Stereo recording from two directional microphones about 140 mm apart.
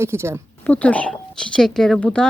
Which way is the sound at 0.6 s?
10° left (ahead or behind).